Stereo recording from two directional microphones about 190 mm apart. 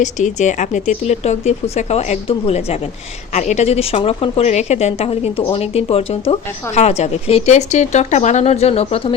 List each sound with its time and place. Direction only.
0.0 s a woman's voice: 40° left (ahead or behind)